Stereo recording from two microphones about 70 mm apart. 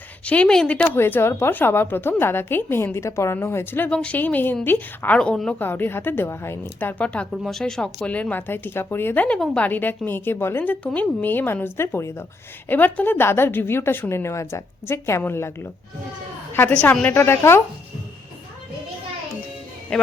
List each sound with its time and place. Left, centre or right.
0.3 s a woman's voice: centre
0.9 s a woman's voice: left
3.8 s speech: centre
5.1 s a woman's voice: centre
5.5 s a woman's voice: left
6.7 s a woman's voice: left
7.3 s speech: centre
8.0 s a woman's voice: left
12.6 s a woman's voice: left
16.9 s speech: centre
17.2 s a woman's voice: left